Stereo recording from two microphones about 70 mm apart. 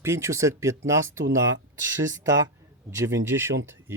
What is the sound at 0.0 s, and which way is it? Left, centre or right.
Speech, right.